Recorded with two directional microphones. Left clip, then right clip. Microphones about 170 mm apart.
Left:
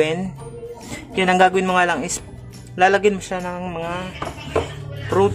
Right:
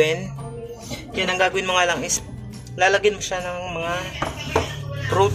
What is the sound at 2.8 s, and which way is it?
Music, 30° left (ahead or behind).